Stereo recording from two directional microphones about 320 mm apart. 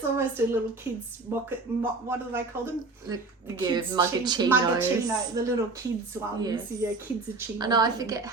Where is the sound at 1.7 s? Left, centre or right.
Centre.